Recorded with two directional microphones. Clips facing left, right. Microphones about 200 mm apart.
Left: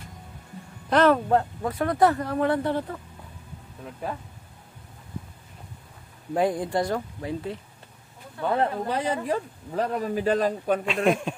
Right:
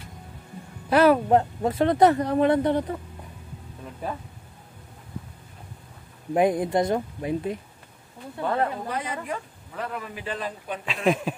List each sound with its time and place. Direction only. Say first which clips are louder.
0.8 s speech: right 2 dB; 10° right (ahead or behind)
6.3 s speech: right 3 dB; 20° right (ahead or behind)
8.5 s speech: left 4 dB; 30° left (ahead or behind)
10.9 s speech: right 3 dB; centre (ahead or behind)